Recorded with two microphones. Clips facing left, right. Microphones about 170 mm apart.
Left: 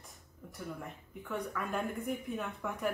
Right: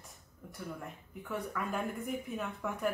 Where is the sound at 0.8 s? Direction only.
Centre (ahead or behind).